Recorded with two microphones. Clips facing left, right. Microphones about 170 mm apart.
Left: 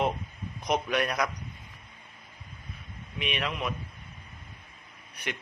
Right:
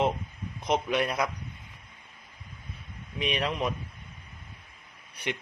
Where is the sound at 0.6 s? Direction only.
25° right (ahead or behind).